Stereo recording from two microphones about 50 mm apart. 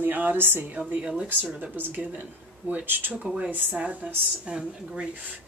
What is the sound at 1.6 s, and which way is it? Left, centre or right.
Speech, right.